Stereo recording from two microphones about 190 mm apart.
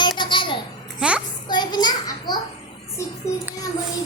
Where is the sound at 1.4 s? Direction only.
20° left (ahead or behind).